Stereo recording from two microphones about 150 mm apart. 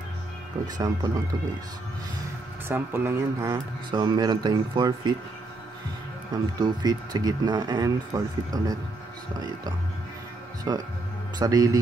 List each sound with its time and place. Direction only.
0.7 s speech: 25° right (ahead or behind)
2.7 s speech: 15° right (ahead or behind)
3.4 s speech: 30° right (ahead or behind)
6.6 s speech: 30° right (ahead or behind)
10.7 s speech: 25° right (ahead or behind)